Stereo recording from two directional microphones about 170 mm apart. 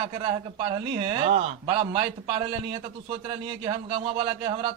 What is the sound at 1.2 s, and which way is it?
A man's voice, 45° right (ahead or behind).